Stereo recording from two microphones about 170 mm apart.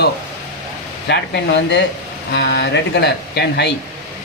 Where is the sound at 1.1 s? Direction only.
85° left.